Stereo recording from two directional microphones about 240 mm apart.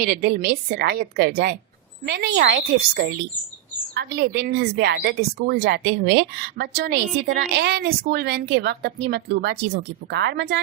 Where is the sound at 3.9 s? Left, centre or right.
Right.